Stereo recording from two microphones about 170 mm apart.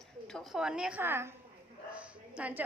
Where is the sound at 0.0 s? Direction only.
Centre (ahead or behind).